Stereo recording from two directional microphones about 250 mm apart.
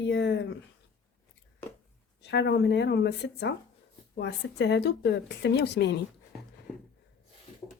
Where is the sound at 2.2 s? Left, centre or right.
Left.